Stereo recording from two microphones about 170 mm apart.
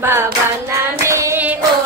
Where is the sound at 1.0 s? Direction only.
15° right (ahead or behind).